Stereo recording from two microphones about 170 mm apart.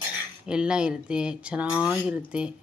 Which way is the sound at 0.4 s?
5° right (ahead or behind).